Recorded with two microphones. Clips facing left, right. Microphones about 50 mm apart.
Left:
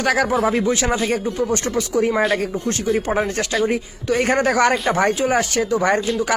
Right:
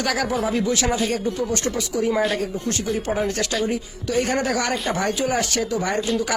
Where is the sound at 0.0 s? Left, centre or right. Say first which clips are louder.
Left 5 dB; left.